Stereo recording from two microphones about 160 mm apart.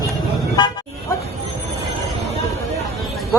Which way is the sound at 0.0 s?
25° left (ahead or behind).